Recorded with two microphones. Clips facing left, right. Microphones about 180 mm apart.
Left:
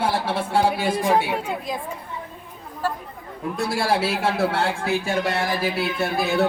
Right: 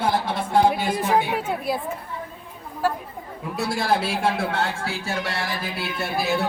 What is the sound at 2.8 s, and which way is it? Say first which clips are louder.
Speech: right 3 dB; 10° right (ahead or behind).